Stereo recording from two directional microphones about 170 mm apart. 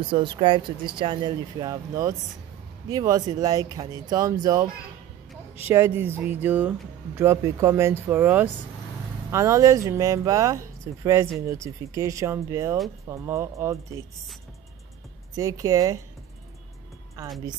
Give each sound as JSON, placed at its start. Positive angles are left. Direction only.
{"t": 0.0, "sound": "speech", "side_deg": -30}
{"t": 5.7, "sound": "speech", "side_deg": -15}
{"t": 15.3, "sound": "speech", "side_deg": -20}